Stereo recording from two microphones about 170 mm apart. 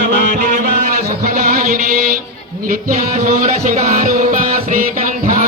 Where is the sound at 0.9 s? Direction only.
60° right (ahead or behind).